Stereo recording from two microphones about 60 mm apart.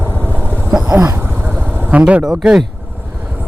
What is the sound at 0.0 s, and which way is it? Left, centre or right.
Vehicle, right.